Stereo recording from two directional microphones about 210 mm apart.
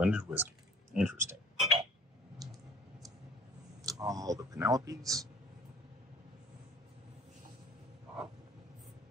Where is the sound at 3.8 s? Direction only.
15° right (ahead or behind).